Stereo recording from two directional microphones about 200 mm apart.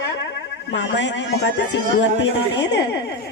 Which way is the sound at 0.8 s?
60° left (ahead or behind).